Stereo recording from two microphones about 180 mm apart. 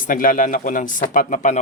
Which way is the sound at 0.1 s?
50° left (ahead or behind).